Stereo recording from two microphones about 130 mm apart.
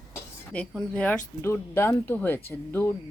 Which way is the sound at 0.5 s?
10° left (ahead or behind).